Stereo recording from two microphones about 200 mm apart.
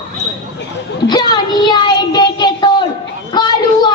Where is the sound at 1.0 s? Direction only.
20° left (ahead or behind).